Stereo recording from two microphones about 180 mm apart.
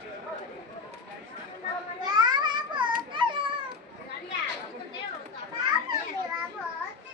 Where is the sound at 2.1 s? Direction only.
25° right (ahead or behind).